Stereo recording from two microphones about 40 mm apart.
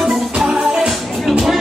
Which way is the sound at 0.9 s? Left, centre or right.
Centre.